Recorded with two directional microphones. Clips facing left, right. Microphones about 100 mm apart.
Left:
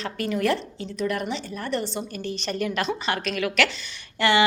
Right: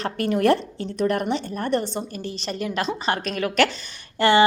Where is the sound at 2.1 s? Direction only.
30° right (ahead or behind).